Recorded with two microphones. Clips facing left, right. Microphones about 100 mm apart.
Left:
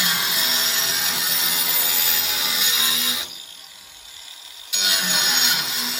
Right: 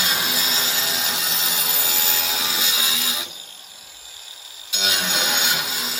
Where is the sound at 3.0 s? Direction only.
20° right (ahead or behind).